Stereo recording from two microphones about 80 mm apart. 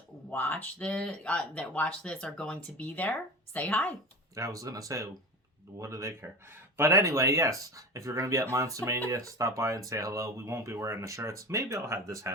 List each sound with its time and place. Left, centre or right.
0.3 s speech: left
4.4 s speech: right
6.2 s speech: right